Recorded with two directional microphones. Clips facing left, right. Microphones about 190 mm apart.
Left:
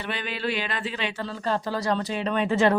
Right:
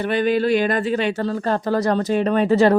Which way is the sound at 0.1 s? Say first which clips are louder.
Right 12 dB; 45° right (ahead or behind).